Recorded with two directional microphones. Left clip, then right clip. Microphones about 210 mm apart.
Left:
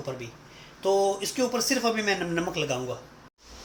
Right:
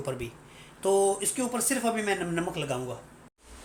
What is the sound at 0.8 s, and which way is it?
Speech, 15° right (ahead or behind).